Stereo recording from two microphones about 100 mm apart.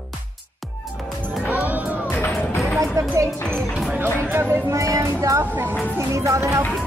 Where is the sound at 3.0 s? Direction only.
35° right (ahead or behind).